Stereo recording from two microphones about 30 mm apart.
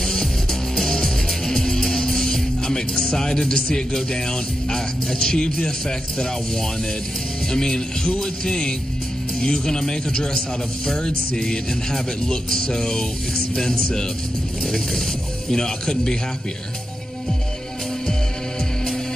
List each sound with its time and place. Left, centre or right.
0.0 s music: centre
7.5 s music: centre
15.5 s music: centre